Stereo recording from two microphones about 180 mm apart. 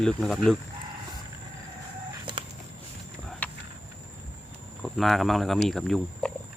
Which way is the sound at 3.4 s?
10° left (ahead or behind).